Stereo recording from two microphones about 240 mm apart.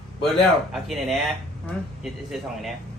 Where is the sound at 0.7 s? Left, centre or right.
Centre.